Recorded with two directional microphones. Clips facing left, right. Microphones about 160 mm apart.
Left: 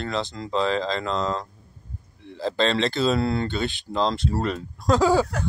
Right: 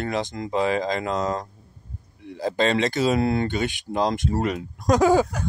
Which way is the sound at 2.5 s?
50° right (ahead or behind).